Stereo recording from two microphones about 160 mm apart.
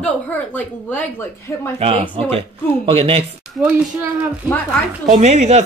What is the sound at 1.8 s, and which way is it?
Speech, 35° right (ahead or behind).